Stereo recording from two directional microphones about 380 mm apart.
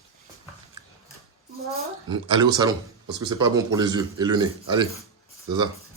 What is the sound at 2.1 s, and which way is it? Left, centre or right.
Speech, centre.